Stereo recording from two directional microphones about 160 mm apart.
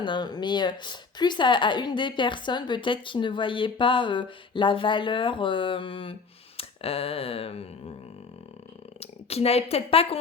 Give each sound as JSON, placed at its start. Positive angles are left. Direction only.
{"t": 0.0, "sound": "speech", "side_deg": 30}
{"t": 9.0, "sound": "a woman's voice", "side_deg": 40}